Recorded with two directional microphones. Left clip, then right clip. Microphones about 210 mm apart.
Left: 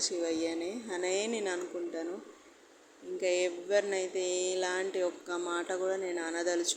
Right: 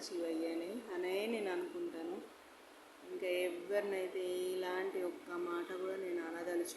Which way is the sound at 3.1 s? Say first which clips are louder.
Left 7 dB; 20° left (ahead or behind).